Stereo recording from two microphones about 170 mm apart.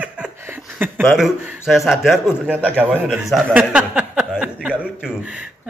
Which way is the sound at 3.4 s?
10° right (ahead or behind).